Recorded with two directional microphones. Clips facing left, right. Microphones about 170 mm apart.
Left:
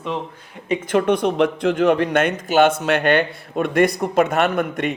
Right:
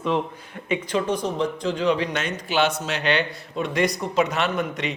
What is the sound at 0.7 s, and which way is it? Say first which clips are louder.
A man's voice: left 6 dB; 50° left (ahead or behind).